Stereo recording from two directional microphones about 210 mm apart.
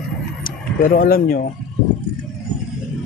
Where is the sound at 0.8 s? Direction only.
45° left (ahead or behind).